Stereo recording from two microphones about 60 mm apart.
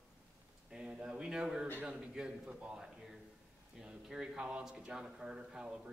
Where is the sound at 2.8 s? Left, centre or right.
Centre.